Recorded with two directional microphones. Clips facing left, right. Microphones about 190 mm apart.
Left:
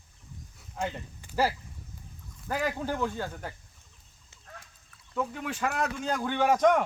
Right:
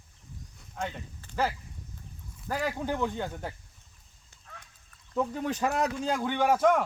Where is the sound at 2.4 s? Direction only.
Centre (ahead or behind).